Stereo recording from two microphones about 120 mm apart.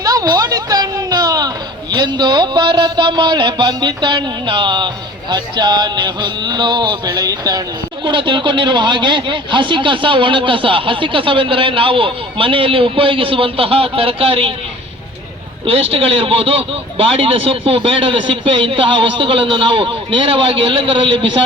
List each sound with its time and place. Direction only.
0.0 s speech: 30° right (ahead or behind)
5.3 s music: 35° right (ahead or behind)
8.0 s speech: 40° right (ahead or behind)
15.6 s speech: 50° right (ahead or behind)